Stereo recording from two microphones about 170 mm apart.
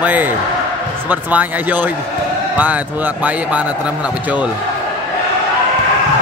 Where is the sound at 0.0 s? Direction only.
10° right (ahead or behind).